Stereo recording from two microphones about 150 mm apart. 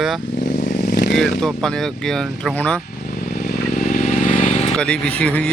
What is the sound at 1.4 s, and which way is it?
Speech, centre (ahead or behind).